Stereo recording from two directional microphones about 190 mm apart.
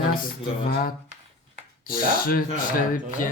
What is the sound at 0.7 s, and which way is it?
Speech, 50° left (ahead or behind).